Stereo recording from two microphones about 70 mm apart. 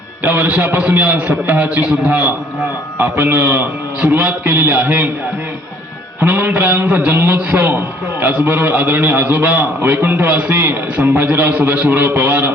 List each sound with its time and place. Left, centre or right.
0.2 s a man's voice: right
3.0 s a man's voice: right
6.4 s a man's voice: right